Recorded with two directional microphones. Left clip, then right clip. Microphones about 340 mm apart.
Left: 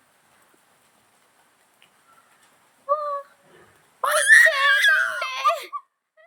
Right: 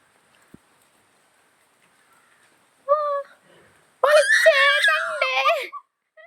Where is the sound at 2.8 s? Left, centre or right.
Centre.